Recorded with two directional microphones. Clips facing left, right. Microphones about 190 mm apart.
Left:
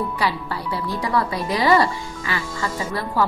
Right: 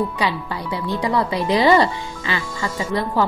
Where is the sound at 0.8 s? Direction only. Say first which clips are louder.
Right 3 dB; 20° right (ahead or behind).